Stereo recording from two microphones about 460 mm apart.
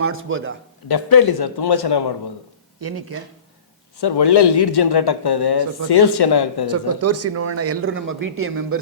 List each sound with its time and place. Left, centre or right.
0.0 s a man's voice: right
0.9 s a man's voice: left
2.8 s a man's voice: right
4.0 s speech: left
6.7 s speech: right